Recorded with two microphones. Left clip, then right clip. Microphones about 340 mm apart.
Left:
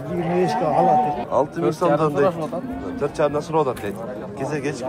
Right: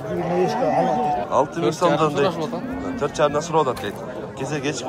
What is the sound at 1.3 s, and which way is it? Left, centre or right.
A man's voice, centre.